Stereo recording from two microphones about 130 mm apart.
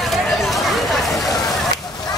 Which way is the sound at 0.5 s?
Centre (ahead or behind).